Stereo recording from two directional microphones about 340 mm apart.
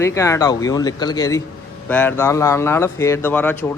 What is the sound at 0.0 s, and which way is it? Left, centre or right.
A man's voice, centre.